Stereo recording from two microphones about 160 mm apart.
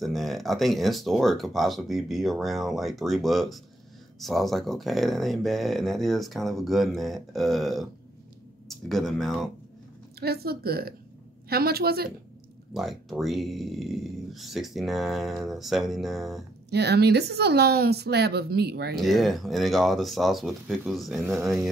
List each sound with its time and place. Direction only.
0.0 s speech: centre (ahead or behind)
10.2 s a woman's voice: 80° right
12.7 s speech: centre (ahead or behind)
16.7 s a woman's voice: 90° right
18.9 s speech: centre (ahead or behind)